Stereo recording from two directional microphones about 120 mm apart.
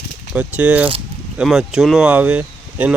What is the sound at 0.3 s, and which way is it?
Speech, 10° right (ahead or behind).